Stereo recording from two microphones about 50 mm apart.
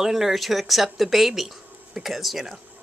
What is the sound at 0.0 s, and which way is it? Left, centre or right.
Speech, centre.